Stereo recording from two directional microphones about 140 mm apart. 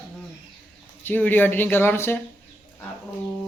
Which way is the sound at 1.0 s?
15° left (ahead or behind).